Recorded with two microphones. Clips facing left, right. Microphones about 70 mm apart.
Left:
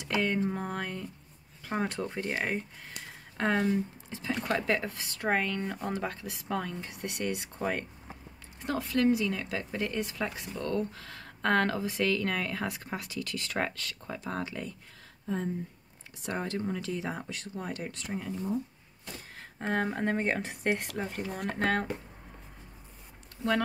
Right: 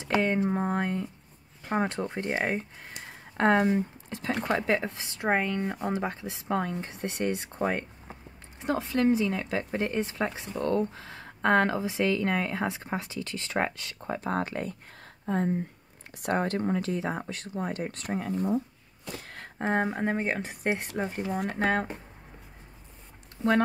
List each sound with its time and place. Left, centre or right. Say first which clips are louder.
0.0 s speech: right 3 dB; right
4.1 s speech: right 3 dB; right
4.5 s speech: right 2 dB; centre
17.9 s speech: right 5 dB; right
19.1 s a sound: right 6 dB; right
19.9 s speech: right 1 dB; centre
20.8 s speech: right 3 dB; centre
21.3 s speech: right 2 dB; centre